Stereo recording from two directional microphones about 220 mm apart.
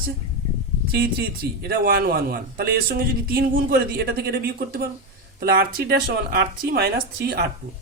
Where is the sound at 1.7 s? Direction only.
45° right (ahead or behind).